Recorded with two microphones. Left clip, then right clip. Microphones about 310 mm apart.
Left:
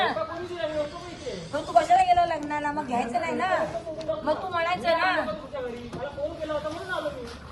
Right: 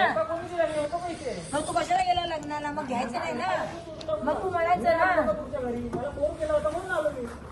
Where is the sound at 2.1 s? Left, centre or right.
Centre.